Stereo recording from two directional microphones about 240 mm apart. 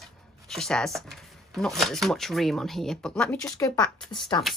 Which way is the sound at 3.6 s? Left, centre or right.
Centre.